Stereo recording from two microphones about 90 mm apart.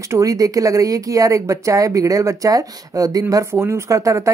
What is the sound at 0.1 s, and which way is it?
Speech, 40° right (ahead or behind).